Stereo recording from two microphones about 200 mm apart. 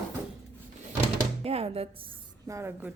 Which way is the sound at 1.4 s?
30° right (ahead or behind).